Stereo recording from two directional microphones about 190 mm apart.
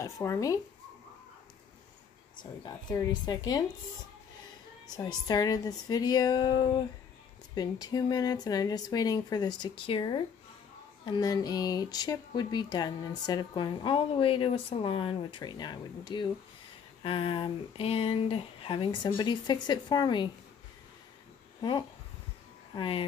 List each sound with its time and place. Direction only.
0.0 s speech: 15° left (ahead or behind)
2.6 s speech: 20° left (ahead or behind)
4.9 s speech: 20° left (ahead or behind)
21.5 s speech: 25° left (ahead or behind)